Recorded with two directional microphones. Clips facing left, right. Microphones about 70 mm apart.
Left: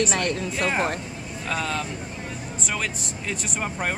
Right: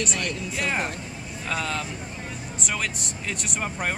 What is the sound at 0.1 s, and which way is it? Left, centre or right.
Speech, left.